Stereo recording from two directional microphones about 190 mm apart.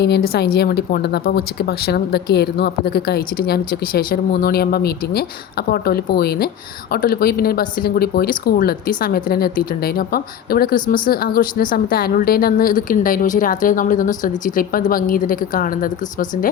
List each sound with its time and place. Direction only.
0.0 s a woman's voice: 60° left (ahead or behind)